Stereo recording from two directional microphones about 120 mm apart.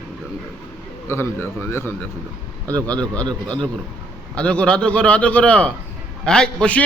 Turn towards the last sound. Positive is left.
turn(degrees=10)  # may be behind; listen again after turning